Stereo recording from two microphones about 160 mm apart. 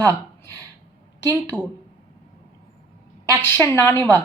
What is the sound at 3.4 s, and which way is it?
Speech, 15° left (ahead or behind).